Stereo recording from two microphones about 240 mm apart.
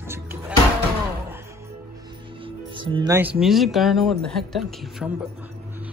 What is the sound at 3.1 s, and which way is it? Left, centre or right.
Speech, centre.